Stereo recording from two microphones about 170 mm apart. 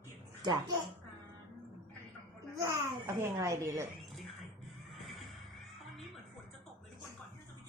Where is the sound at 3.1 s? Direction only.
20° right (ahead or behind).